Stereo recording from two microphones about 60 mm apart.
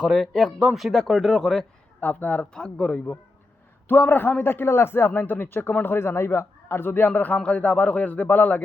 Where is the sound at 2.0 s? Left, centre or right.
Left.